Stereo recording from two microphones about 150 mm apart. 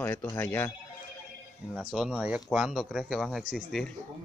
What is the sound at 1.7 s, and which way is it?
Speech, 5° right (ahead or behind).